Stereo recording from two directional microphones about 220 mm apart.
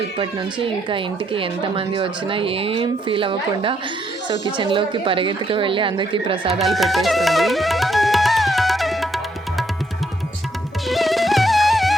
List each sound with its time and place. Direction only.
0.2 s speech: 25° right (ahead or behind)
6.6 s music: centre (ahead or behind)
10.8 s music: centre (ahead or behind)